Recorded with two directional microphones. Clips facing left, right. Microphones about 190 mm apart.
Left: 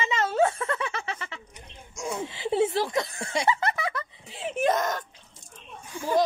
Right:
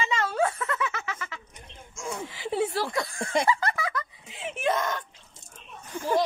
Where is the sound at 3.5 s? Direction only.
25° left (ahead or behind); by 5.0 s 40° left (ahead or behind).